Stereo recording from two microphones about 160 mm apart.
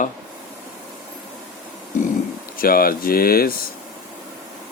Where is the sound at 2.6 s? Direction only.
65° left (ahead or behind).